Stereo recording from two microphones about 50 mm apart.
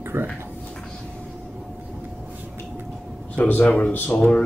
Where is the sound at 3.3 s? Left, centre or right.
Left.